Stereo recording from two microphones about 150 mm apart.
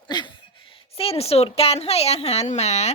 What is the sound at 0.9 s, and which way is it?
A woman's voice, 40° left (ahead or behind).